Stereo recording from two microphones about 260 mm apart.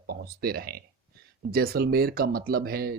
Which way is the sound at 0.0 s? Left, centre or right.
Right.